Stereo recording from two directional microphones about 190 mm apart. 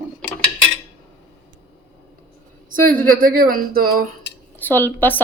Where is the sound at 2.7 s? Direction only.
45° right (ahead or behind).